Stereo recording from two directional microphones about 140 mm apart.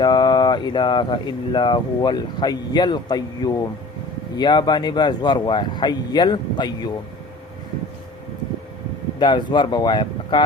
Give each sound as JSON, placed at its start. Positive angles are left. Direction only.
{"t": 0.0, "sound": "speech", "side_deg": 30}
{"t": 9.1, "sound": "speech", "side_deg": 35}